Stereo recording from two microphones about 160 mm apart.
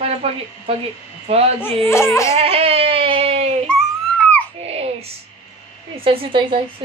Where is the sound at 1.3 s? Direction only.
40° right (ahead or behind).